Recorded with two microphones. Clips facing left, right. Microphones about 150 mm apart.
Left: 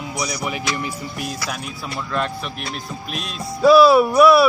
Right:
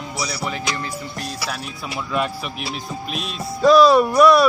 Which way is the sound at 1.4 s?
Centre (ahead or behind).